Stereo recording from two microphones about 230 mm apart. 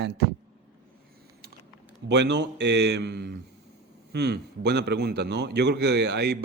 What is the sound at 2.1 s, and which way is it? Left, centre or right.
A man's voice, right.